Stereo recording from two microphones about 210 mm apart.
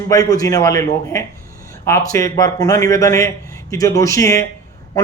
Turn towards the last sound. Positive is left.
turn(degrees=15)  # may be behind; listen again after turning